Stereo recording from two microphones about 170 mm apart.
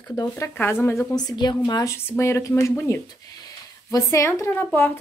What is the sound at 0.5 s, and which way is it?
A woman's voice, 10° left (ahead or behind).